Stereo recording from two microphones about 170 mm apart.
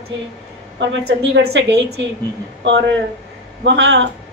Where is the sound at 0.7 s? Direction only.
80° right.